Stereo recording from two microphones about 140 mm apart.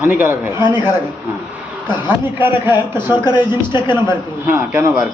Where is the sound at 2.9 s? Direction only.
30° left (ahead or behind).